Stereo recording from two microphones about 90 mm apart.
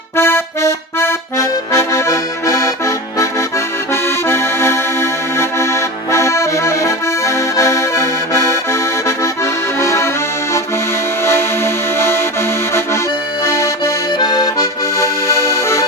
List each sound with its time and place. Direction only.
0.2 s accordion: 30° left (ahead or behind)
4.3 s accordion: 30° left (ahead or behind)
11.3 s music: 30° left (ahead or behind)
13.4 s accordion: 35° left (ahead or behind)
14.2 s accordion: 50° left (ahead or behind)
14.6 s accordion: 35° left (ahead or behind)